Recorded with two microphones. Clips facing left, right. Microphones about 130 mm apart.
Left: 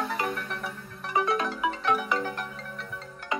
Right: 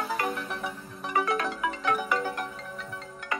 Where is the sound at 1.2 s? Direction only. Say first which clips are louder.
Left 1 dB; 25° left (ahead or behind).